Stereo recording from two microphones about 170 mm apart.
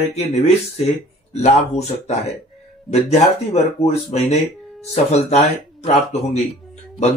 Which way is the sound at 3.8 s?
40° left (ahead or behind).